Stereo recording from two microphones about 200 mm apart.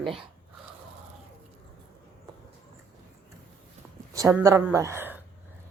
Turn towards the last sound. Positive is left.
turn(degrees=-10)  # may be behind; listen again after turning